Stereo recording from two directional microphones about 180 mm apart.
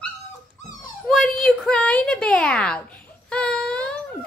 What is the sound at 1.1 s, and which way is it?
A woman's voice, 5° left (ahead or behind).